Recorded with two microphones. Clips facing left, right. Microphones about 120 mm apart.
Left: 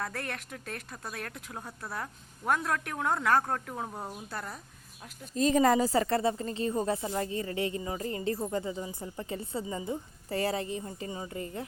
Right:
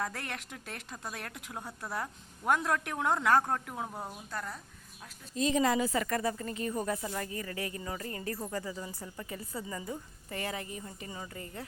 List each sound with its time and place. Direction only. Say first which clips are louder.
0.0 s speech: left 1 dB; 15° right (ahead or behind)
3.8 s a woman's voice: left 2 dB; 5° left (ahead or behind)
5.3 s a woman's voice: left 4 dB; 40° left (ahead or behind); by 10.0 s 20° left (ahead or behind)
10.2 s a woman's voice: left 7 dB; 35° left (ahead or behind)